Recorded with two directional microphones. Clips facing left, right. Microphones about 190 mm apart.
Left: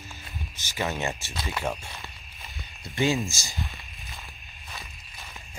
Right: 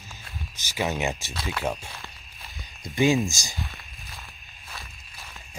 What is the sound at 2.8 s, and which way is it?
Speech, 15° right (ahead or behind).